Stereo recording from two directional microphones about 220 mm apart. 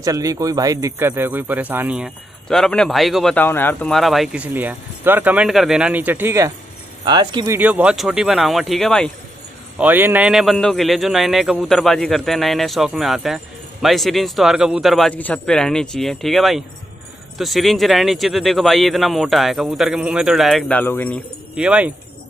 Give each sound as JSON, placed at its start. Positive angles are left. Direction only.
{"t": 0.0, "sound": "a man's voice", "side_deg": -15}
{"t": 9.8, "sound": "a man's voice", "side_deg": -10}
{"t": 21.5, "sound": "a man's voice", "side_deg": -5}